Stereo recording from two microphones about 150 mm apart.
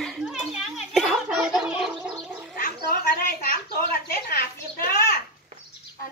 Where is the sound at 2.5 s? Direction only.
70° left (ahead or behind).